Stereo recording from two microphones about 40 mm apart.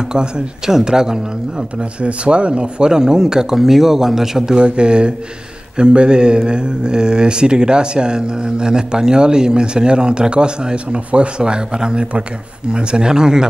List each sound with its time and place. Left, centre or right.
0.7 s speech: centre
1.8 s speech: right; by 4.6 s centre
4.6 s speech: right